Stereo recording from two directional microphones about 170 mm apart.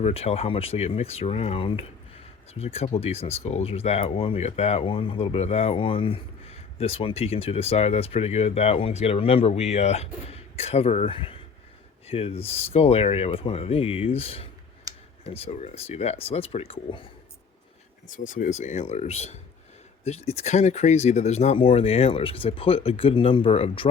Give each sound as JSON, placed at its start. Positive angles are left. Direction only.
{"t": 0.0, "sound": "speech", "side_deg": 35}
{"t": 18.1, "sound": "speech", "side_deg": 50}